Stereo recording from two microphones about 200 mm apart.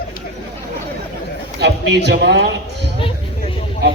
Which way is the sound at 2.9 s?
25° left (ahead or behind).